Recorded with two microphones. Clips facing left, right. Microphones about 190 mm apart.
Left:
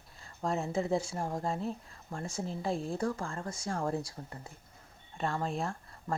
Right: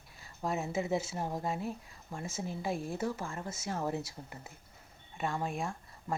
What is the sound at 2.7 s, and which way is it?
Speech, 30° left (ahead or behind).